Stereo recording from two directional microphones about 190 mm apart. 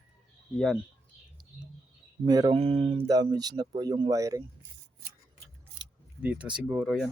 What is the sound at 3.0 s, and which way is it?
Speech, 20° right (ahead or behind).